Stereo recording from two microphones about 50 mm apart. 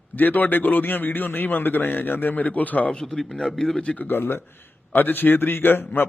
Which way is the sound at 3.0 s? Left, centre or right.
Centre.